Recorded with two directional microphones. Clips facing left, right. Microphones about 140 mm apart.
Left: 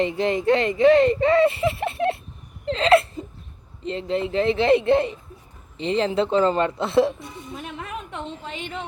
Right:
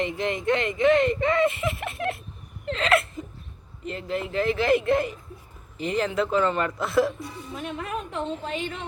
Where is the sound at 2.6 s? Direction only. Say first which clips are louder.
Left 6 dB; 30° left (ahead or behind).